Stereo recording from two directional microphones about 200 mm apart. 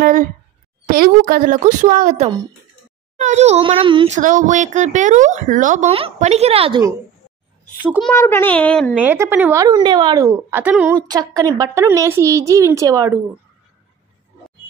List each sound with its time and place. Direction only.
0.0 s a woman's voice: 45° right (ahead or behind); by 4.2 s 25° right (ahead or behind)
4.2 s speech: 40° right (ahead or behind)
7.8 s speech: 10° right (ahead or behind)
8.1 s a child's voice: 10° left (ahead or behind)
9.0 s speech: 10° right (ahead or behind)
11.0 s a woman's voice: 20° right (ahead or behind)